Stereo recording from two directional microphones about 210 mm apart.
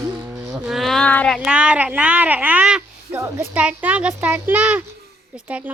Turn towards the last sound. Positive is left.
turn(degrees=-5)  # may be behind; listen again after turning